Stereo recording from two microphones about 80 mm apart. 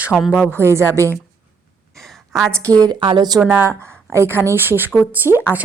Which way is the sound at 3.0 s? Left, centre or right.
Right.